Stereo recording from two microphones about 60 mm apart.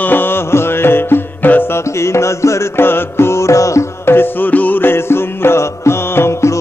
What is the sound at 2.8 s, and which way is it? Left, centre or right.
Music, left.